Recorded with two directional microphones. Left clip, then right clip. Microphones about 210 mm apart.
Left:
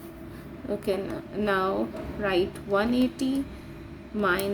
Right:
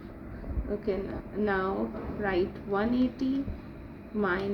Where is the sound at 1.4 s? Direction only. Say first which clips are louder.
Left 3 dB; 35° left (ahead or behind).